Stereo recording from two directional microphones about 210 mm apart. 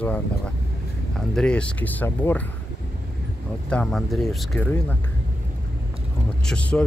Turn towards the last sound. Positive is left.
turn(degrees=5)  # may be behind; listen again after turning